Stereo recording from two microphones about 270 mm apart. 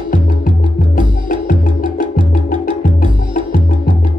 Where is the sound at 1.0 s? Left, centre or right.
Left.